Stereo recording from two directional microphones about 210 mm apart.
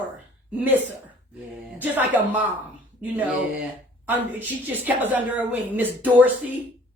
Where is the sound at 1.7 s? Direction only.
10° right (ahead or behind).